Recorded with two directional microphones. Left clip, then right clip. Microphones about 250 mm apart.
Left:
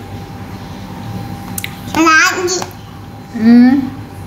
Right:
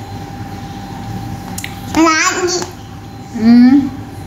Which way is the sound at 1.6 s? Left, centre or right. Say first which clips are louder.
Right 1 dB; left.